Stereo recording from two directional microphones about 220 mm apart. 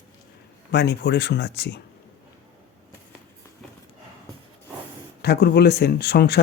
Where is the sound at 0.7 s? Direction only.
50° left (ahead or behind).